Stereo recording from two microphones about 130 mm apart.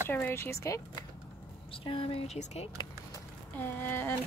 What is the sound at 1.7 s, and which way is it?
Speech, 45° left (ahead or behind).